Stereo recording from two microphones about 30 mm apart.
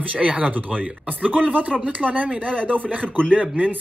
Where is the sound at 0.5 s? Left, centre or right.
Right.